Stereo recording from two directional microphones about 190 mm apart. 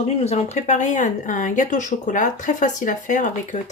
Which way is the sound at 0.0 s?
35° left (ahead or behind).